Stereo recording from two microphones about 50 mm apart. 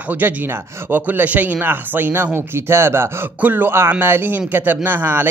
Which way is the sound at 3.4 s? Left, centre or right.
Right.